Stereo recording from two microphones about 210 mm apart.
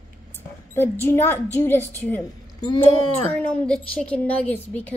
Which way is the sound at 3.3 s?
5° left (ahead or behind).